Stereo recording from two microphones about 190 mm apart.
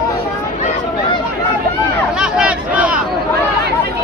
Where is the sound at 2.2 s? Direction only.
5° right (ahead or behind).